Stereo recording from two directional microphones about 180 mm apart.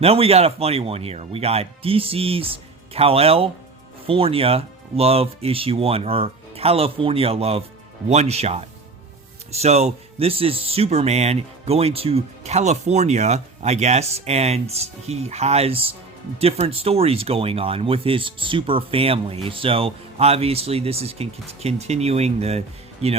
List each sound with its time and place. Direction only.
0.0 s speech: 35° right (ahead or behind)